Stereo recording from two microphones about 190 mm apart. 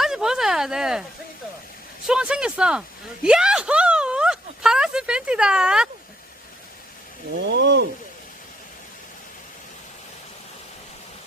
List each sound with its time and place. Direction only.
0.0 s a sound: 5° right (ahead or behind)
2.0 s speech: 5° right (ahead or behind)
7.4 s speech: 70° right (ahead or behind)